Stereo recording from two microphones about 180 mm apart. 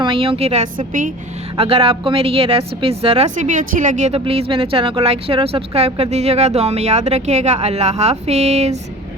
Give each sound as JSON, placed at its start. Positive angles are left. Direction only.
{"t": 0.0, "sound": "a woman's voice", "side_deg": -30}
{"t": 1.5, "sound": "a woman's voice", "side_deg": -30}